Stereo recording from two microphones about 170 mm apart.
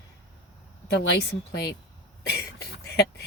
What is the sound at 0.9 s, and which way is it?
Speech, 85° left.